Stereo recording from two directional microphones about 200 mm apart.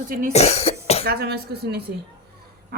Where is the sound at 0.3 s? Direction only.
30° left (ahead or behind).